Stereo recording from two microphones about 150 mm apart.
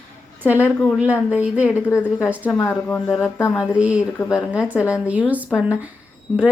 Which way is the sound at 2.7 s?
10° left (ahead or behind).